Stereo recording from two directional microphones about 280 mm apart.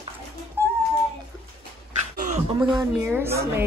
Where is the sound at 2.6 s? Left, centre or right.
Centre.